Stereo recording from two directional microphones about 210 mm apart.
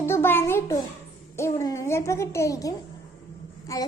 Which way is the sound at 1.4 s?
15° left (ahead or behind).